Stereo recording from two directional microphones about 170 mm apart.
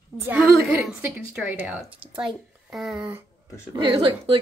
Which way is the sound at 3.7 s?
30° right (ahead or behind).